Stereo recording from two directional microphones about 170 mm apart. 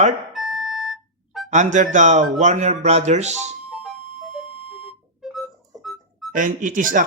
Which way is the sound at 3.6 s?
5° right (ahead or behind).